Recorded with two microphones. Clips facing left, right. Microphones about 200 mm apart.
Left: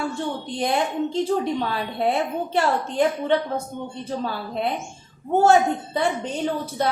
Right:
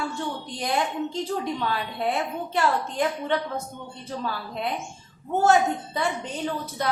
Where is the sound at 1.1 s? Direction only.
30° left (ahead or behind).